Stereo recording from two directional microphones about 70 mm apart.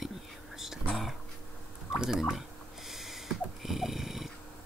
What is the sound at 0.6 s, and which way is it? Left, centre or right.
Whispering, centre.